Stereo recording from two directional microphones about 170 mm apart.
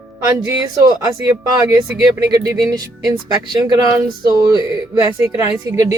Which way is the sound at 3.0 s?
20° right (ahead or behind).